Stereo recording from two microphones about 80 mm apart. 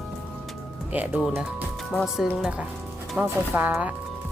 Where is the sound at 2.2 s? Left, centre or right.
Centre.